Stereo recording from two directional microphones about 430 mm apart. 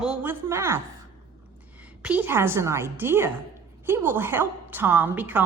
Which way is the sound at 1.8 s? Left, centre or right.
Centre.